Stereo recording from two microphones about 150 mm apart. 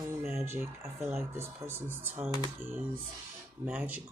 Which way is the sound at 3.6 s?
10° right (ahead or behind).